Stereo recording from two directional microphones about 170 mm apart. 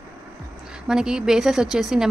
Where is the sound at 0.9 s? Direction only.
5° right (ahead or behind).